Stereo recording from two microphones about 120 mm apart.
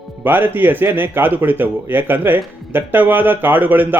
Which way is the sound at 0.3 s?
15° right (ahead or behind).